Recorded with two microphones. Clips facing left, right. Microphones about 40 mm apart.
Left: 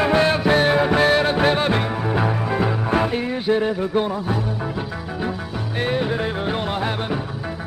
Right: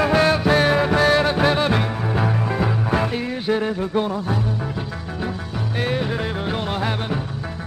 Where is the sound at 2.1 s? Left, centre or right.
Centre.